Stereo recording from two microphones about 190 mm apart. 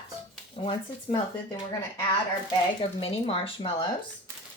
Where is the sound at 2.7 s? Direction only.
30° left (ahead or behind).